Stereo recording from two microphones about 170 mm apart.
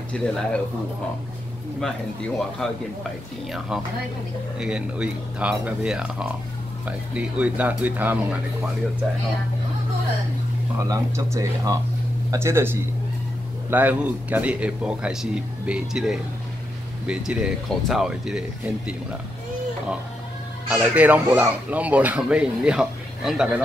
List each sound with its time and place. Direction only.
0.1 s speech: 5° left (ahead or behind)
1.8 s speech: centre (ahead or behind)
10.9 s speech: 20° right (ahead or behind); by 18.4 s centre (ahead or behind)
20.6 s speech: 10° right (ahead or behind)